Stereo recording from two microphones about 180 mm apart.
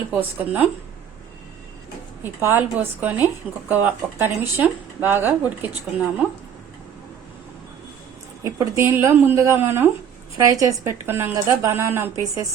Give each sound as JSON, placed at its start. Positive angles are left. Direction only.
{"t": 0.1, "sound": "a woman's voice", "side_deg": -10}
{"t": 2.2, "sound": "a woman's voice", "side_deg": -10}
{"t": 8.4, "sound": "a woman's voice", "side_deg": -15}